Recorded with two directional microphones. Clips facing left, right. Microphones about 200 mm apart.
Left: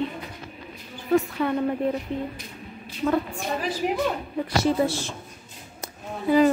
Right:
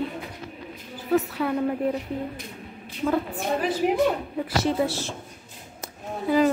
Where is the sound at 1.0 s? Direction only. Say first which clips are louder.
Left 1 dB; 5° right (ahead or behind).